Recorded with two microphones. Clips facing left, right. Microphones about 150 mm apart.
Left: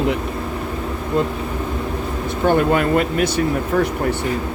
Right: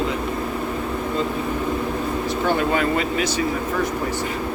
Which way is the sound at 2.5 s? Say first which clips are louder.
Left 6 dB; 50° left (ahead or behind).